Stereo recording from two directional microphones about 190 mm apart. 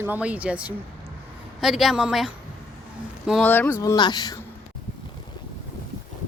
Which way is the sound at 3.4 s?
10° left (ahead or behind).